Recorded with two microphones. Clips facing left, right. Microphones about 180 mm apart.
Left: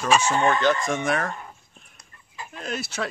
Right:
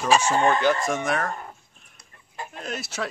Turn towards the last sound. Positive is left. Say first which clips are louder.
# left 1 dB
turn(degrees=0)  # may be behind; listen again after turning